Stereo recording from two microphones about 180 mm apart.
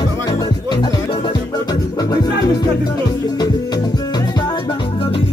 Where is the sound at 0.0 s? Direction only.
25° left (ahead or behind).